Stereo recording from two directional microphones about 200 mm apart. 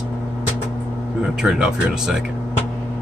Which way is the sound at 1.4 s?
5° right (ahead or behind).